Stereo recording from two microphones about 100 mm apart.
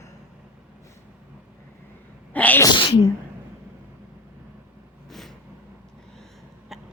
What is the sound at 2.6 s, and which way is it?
Speech, 50° left (ahead or behind).